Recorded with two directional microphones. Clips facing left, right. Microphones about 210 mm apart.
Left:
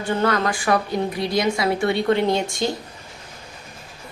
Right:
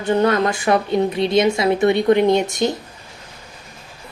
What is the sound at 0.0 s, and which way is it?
A woman's voice, 20° right (ahead or behind).